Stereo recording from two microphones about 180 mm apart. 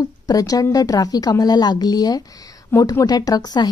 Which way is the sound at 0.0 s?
20° left (ahead or behind).